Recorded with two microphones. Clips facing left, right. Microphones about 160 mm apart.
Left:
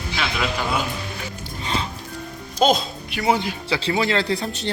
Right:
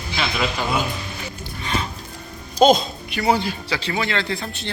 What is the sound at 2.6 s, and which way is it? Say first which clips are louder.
Speech: right 4 dB; 5° left (ahead or behind).